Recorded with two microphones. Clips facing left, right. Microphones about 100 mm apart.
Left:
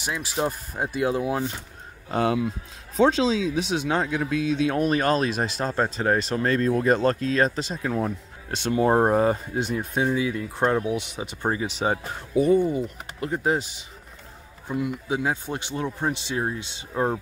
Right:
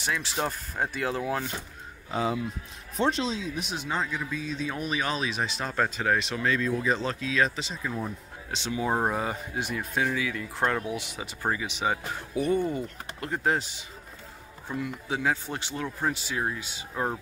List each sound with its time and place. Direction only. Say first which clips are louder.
0.0 s speech: left 3 dB; 15° left (ahead or behind)
2.0 s speech: left 5 dB; 65° left (ahead or behind)
3.3 s speech: left 8 dB; 90° left; by 5.7 s 45° left (ahead or behind)
5.7 s speech: left 2 dB; 30° left (ahead or behind)
9.6 s speech: left 4 dB; 25° left (ahead or behind)
11.5 s speech: left 4 dB; 35° left (ahead or behind)
12.5 s speech: left 6 dB; 10° left (ahead or behind)
14.7 s speech: left 5 dB; 15° left (ahead or behind)